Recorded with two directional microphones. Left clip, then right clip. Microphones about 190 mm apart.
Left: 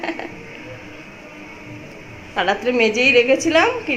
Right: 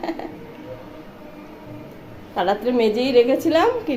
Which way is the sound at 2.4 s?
10° left (ahead or behind).